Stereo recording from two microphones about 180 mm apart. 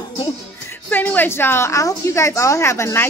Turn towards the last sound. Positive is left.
turn(degrees=15)  # may be behind; listen again after turning